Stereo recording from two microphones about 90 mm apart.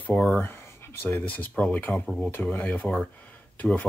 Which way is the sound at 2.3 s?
20° left (ahead or behind).